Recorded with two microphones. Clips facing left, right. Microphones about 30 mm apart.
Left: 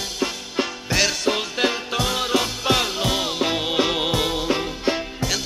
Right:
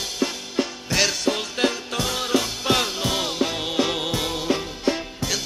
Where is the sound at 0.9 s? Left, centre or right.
Centre.